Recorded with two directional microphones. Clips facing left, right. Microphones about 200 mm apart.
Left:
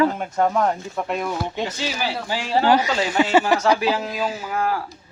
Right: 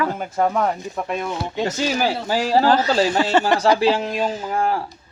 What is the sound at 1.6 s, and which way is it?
Speech, 45° right (ahead or behind).